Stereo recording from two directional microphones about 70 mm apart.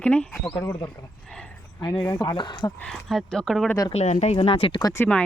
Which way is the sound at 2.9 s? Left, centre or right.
Centre.